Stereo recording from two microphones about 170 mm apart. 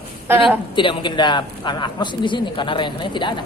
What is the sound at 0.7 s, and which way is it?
Speech, 30° left (ahead or behind).